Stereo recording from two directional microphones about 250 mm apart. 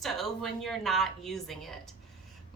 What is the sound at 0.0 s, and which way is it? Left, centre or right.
A woman's voice, centre.